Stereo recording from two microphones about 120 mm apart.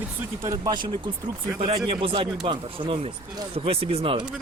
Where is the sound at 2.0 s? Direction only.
45° right (ahead or behind).